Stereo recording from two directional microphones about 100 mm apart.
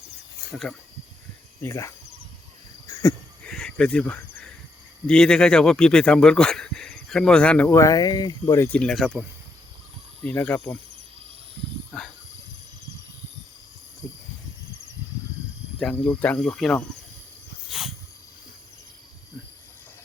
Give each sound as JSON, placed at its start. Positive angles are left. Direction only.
{"t": 0.5, "sound": "speech", "side_deg": 5}
{"t": 1.6, "sound": "speech", "side_deg": 25}
{"t": 2.8, "sound": "a sound", "side_deg": 30}
{"t": 3.4, "sound": "cricket", "side_deg": 10}
{"t": 5.0, "sound": "speech", "side_deg": 10}
{"t": 7.7, "sound": "speech", "side_deg": 35}
{"t": 8.7, "sound": "speech", "side_deg": 10}
{"t": 10.2, "sound": "speech", "side_deg": 15}
{"t": 16.0, "sound": "speech", "side_deg": 15}
{"t": 17.7, "sound": "a sound", "side_deg": -5}